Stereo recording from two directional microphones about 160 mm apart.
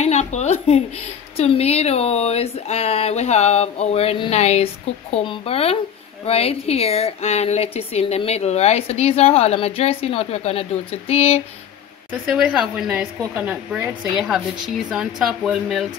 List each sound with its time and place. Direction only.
0.0 s a woman's voice: 45° left (ahead or behind)
12.1 s speech: 5° right (ahead or behind)